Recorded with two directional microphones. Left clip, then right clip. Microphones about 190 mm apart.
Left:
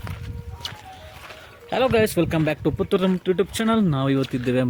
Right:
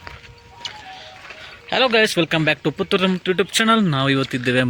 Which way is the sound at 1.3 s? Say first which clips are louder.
Right 4 dB; 5° left (ahead or behind).